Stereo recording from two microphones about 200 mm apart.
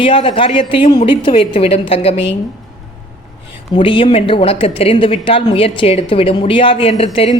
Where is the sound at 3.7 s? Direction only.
25° left (ahead or behind).